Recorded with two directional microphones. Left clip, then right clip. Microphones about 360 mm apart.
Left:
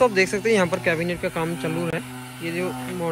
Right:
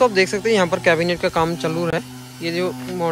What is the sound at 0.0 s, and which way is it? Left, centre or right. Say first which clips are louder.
Speech: right 3 dB; centre.